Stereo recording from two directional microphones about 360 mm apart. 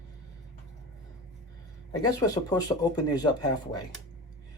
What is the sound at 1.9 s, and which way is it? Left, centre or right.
Speech, centre.